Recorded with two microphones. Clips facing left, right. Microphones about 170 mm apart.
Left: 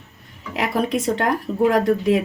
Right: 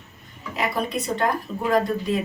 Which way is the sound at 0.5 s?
90° left.